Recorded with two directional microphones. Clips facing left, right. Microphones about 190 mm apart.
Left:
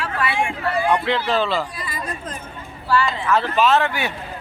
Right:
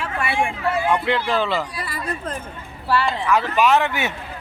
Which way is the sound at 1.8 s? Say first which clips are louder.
Right 2 dB; 65° right (ahead or behind).